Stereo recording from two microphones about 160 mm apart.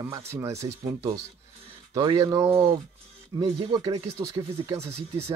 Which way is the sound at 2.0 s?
20° right (ahead or behind).